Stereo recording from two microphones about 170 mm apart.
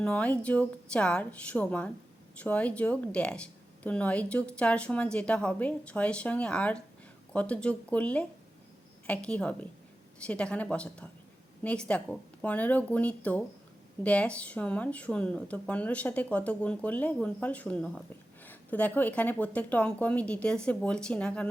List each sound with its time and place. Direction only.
0.0 s a woman's voice: 10° left (ahead or behind)